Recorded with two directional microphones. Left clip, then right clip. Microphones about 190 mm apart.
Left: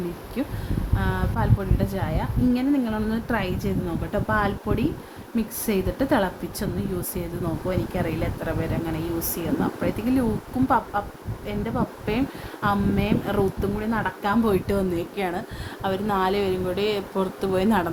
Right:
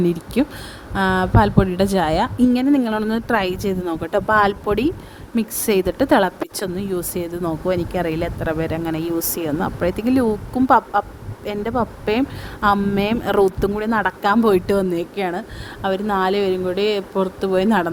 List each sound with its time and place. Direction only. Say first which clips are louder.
0.4 s a woman's voice: right 8 dB; 40° right (ahead or behind)